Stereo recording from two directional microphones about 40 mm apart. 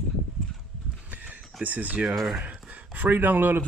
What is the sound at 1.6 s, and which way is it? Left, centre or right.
Speech, right.